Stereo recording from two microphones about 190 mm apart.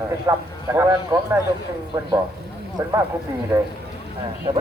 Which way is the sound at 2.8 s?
15° right (ahead or behind).